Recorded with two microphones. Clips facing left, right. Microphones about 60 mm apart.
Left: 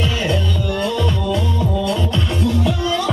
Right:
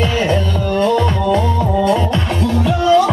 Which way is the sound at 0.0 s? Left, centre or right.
Right.